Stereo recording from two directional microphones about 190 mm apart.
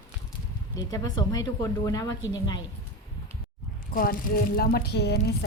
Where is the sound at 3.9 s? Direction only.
50° left (ahead or behind).